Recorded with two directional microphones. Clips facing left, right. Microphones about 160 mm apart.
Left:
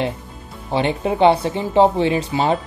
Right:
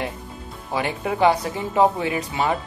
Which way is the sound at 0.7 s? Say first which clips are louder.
Left 5 dB; 25° left (ahead or behind).